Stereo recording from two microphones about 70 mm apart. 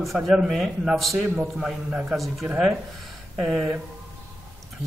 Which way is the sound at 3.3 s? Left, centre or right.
Centre.